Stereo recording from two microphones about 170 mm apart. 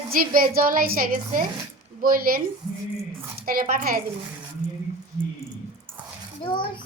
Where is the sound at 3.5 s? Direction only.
55° right (ahead or behind).